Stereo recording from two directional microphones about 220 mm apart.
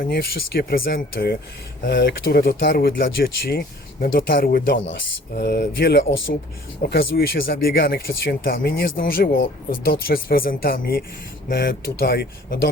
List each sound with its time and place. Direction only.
0.0 s speech: 45° left (ahead or behind)